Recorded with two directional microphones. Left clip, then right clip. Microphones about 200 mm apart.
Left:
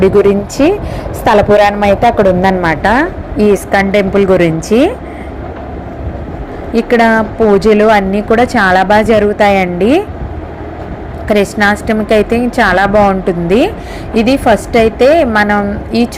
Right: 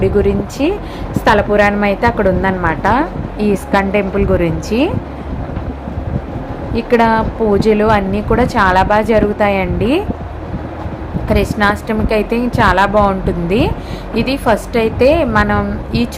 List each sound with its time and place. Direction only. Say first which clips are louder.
0.0 s a woman's voice: left 6 dB; 20° left (ahead or behind)
6.7 s a woman's voice: left 3 dB; 15° left (ahead or behind)
11.3 s a woman's voice: left 4 dB; 15° left (ahead or behind)